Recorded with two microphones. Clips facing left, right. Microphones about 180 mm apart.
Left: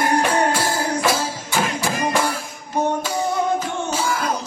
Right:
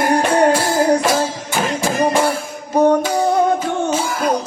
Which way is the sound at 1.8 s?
35° right (ahead or behind).